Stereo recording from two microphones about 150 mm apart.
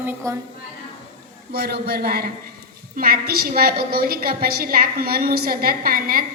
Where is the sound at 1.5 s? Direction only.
90° right.